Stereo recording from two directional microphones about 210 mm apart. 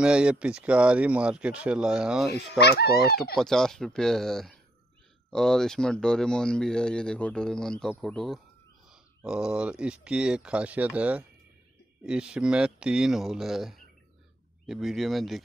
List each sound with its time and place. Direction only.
0.0 s speech: 5° right (ahead or behind)
2.6 s speech: 50° left (ahead or behind)
3.3 s speech: centre (ahead or behind)